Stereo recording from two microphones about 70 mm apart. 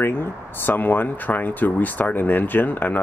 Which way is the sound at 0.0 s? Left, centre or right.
Left.